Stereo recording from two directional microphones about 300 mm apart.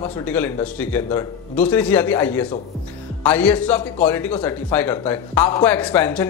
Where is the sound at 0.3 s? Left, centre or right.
Centre.